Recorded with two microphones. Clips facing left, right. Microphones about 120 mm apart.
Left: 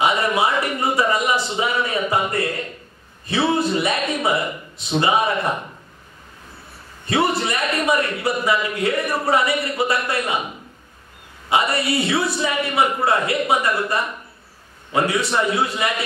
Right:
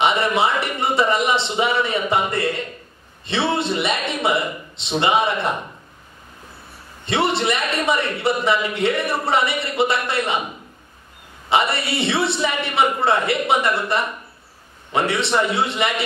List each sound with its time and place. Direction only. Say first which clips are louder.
0.0 s a man's voice: right 1 dB; 25° right (ahead or behind)
7.1 s a man's voice: even; 25° right (ahead or behind)
11.5 s a man's voice: even; 25° right (ahead or behind)
14.9 s a man's voice: even; 25° right (ahead or behind)